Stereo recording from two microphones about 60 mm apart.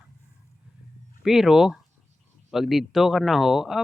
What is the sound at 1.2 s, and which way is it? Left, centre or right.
Speech, centre.